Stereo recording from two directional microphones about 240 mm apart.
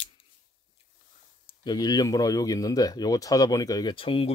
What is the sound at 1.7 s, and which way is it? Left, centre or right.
Speech, centre.